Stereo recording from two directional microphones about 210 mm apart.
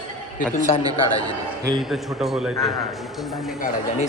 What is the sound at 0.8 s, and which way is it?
A man's voice, 20° right (ahead or behind).